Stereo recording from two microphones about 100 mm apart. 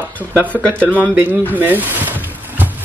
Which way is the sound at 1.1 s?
20° right (ahead or behind).